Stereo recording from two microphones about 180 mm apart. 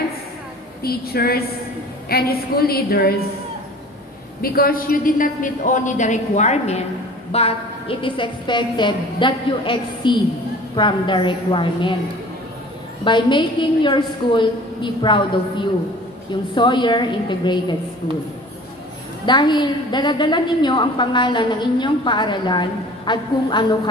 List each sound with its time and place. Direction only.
0.8 s a woman's voice: 60° left (ahead or behind)
4.4 s a woman's voice: 55° left (ahead or behind); by 11.9 s 25° left (ahead or behind)
13.0 s a woman's voice: 25° left (ahead or behind)
19.2 s a woman's voice: 25° left (ahead or behind)